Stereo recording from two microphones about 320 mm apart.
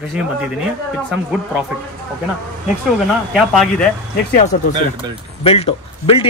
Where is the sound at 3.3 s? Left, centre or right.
Centre.